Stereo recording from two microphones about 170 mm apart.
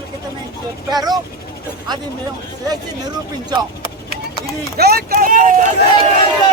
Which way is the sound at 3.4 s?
30° right (ahead or behind).